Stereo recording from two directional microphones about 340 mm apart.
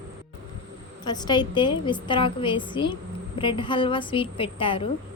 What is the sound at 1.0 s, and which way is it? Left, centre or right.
A woman's voice, centre.